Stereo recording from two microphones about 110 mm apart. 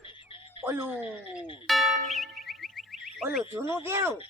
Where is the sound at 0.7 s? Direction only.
20° right (ahead or behind).